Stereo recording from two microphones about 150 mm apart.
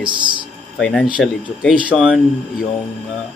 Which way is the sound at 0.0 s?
30° right (ahead or behind).